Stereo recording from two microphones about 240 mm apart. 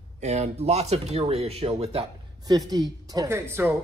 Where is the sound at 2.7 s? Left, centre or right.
Centre.